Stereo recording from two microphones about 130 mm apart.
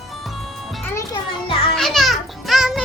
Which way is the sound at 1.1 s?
45° left (ahead or behind).